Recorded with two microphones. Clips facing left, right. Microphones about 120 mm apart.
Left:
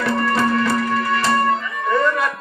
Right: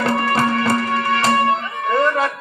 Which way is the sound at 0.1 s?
55° right (ahead or behind).